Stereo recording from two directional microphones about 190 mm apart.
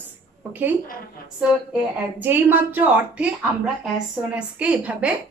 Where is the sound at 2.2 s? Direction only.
10° right (ahead or behind).